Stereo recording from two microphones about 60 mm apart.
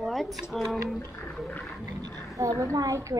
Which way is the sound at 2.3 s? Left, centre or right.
Right.